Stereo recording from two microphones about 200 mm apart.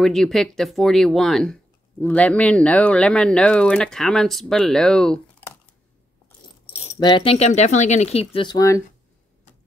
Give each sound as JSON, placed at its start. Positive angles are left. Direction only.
{"t": 0.0, "sound": "speech", "side_deg": 0}
{"t": 6.9, "sound": "speech", "side_deg": 20}